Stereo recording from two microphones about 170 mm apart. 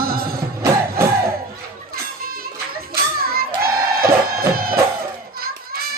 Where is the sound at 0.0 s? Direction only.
60° right (ahead or behind).